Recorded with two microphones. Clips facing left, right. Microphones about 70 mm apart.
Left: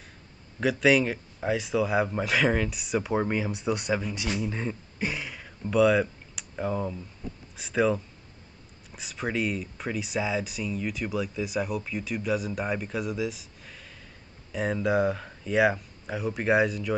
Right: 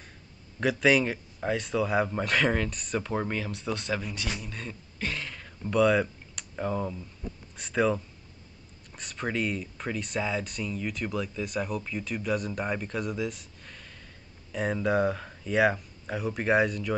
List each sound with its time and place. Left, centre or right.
0.6 s speech: centre